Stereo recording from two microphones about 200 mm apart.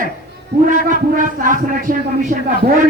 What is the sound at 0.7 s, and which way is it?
A man's voice, 40° right (ahead or behind).